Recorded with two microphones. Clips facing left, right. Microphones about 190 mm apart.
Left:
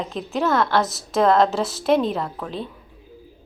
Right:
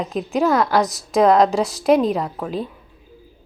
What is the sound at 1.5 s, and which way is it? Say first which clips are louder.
Speech: right 3 dB; 5° left (ahead or behind).